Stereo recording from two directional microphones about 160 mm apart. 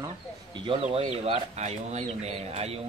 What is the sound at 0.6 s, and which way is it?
Speech, 35° right (ahead or behind).